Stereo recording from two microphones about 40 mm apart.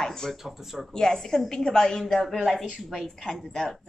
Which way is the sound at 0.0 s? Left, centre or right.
Centre.